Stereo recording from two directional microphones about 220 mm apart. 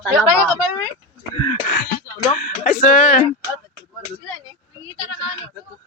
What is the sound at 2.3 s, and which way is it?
Speech, 35° left (ahead or behind).